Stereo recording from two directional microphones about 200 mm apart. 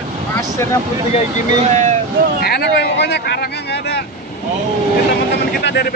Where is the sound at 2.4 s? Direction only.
50° left (ahead or behind).